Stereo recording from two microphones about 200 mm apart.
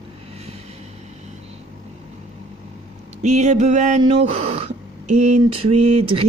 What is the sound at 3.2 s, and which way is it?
Speech, 35° right (ahead or behind).